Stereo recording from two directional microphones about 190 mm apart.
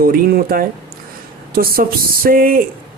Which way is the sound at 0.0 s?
50° right (ahead or behind).